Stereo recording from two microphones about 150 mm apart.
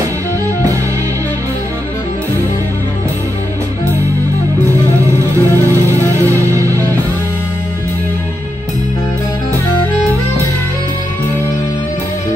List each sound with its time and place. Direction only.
5.3 s music: 20° right (ahead or behind)